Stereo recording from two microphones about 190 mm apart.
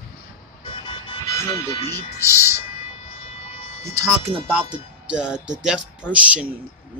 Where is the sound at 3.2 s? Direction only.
35° left (ahead or behind).